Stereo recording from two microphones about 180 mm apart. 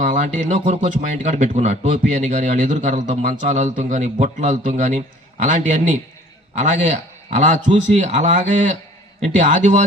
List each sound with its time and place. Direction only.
0.0 s a man's voice: 45° right (ahead or behind)